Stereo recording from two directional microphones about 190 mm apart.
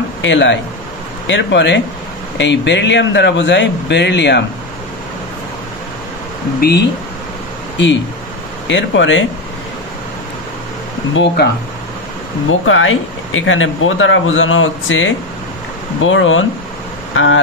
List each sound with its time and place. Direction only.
0.2 s speech: 70° left (ahead or behind)
6.6 s speech: 55° left (ahead or behind)
7.7 s speech: 70° left (ahead or behind)
11.4 s speech: 60° left (ahead or behind)
12.4 s speech: 90° left